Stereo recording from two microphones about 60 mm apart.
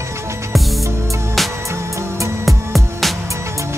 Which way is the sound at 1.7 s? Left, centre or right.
Right.